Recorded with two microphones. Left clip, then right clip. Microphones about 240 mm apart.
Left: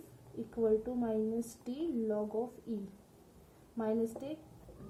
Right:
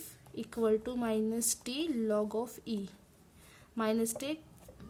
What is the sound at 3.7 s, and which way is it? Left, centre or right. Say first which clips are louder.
Speech: right 2 dB; right.